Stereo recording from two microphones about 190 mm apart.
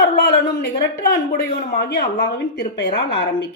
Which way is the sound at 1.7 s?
60° left (ahead or behind).